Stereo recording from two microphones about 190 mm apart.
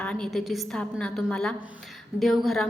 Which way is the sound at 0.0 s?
5° left (ahead or behind).